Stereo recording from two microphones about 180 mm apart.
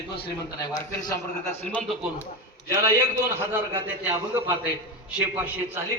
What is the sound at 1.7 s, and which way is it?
Speech, 5° left (ahead or behind).